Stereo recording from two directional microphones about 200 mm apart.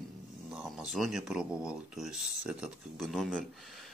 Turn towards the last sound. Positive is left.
turn(degrees=0)  # may be behind; listen again after turning